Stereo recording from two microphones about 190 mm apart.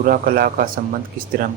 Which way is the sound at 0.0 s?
50° right (ahead or behind).